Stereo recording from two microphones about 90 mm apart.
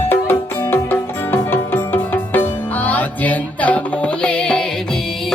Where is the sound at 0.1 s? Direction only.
25° left (ahead or behind).